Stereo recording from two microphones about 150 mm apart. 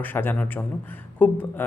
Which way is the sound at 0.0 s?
15° left (ahead or behind).